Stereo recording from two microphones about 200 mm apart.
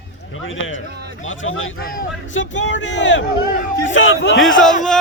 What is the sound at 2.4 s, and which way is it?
Speech, 70° left (ahead or behind).